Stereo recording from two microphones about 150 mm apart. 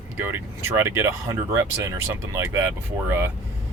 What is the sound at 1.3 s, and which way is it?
Speech, 20° right (ahead or behind).